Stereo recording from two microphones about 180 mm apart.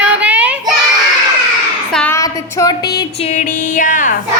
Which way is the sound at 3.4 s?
50° left (ahead or behind).